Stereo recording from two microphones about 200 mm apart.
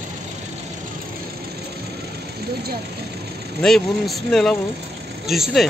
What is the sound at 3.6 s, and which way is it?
Speech, centre (ahead or behind).